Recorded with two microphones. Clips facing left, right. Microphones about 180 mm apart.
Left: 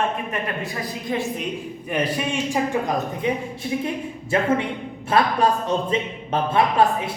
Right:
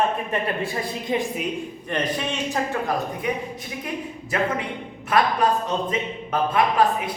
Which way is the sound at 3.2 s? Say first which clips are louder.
Left 3 dB; 30° left (ahead or behind).